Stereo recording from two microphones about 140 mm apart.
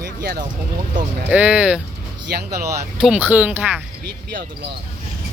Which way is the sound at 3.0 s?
10° right (ahead or behind).